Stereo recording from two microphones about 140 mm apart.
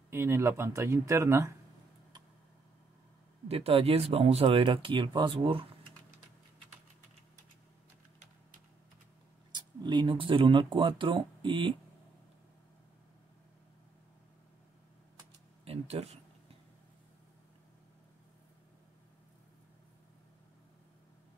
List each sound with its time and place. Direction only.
0.1 s speech: 20° right (ahead or behind)
3.4 s speech: 45° right (ahead or behind)
9.5 s speech: 35° right (ahead or behind)
15.6 s a sound: 45° right (ahead or behind)